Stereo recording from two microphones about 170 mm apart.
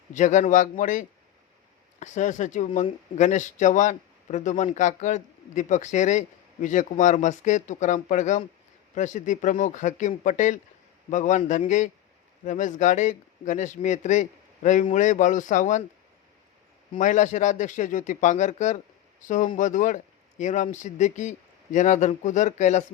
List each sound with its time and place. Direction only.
0.1 s a man's voice: 45° left (ahead or behind)
17.0 s a man's voice: 45° left (ahead or behind)